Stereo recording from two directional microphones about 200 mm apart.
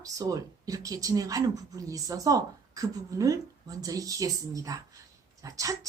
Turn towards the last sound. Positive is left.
turn(degrees=-15)  # may be behind; listen again after turning